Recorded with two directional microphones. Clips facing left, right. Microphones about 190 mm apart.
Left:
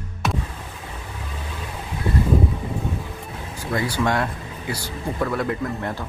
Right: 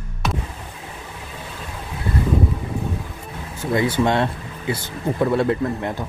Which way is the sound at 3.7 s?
20° right (ahead or behind).